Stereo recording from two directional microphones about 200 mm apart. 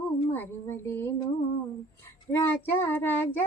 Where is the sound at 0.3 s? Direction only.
10° left (ahead or behind).